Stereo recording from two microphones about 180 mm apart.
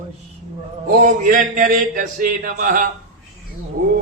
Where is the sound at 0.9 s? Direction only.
45° right (ahead or behind).